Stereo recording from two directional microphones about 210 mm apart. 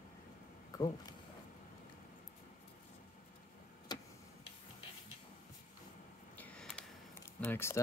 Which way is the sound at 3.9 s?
20° left (ahead or behind).